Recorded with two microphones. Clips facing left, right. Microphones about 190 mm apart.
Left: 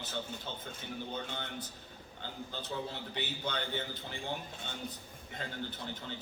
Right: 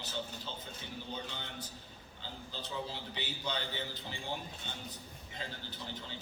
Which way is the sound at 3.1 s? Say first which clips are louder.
Left 2 dB; 55° left (ahead or behind).